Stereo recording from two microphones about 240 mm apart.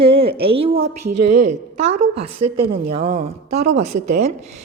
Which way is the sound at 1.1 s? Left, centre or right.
Right.